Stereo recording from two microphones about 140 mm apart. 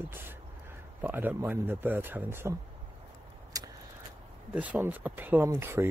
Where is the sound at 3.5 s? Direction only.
25° right (ahead or behind).